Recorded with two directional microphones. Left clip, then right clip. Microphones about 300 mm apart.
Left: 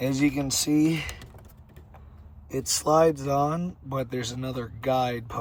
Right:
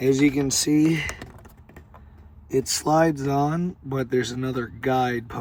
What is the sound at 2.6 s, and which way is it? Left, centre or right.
Speech, centre.